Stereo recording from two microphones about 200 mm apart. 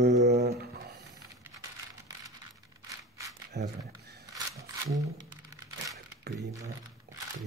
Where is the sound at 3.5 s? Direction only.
55° right (ahead or behind).